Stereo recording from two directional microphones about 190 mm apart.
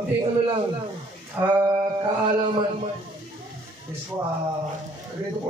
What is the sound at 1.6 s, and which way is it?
Speech, 20° right (ahead or behind).